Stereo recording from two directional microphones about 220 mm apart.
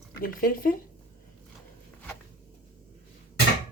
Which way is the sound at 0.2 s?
40° left (ahead or behind).